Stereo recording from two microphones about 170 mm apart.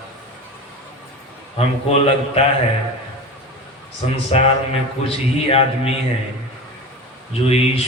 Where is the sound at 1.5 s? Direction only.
35° left (ahead or behind).